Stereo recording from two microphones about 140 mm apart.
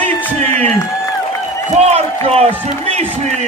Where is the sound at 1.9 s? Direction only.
45° right (ahead or behind).